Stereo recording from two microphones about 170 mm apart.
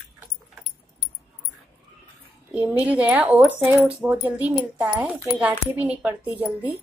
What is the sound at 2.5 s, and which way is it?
A child's voice, 10° right (ahead or behind).